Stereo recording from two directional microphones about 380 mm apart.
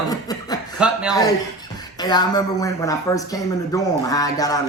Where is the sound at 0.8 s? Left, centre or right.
Centre.